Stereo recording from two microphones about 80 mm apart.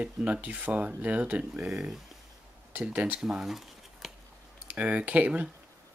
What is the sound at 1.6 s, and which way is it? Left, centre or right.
Speech, centre.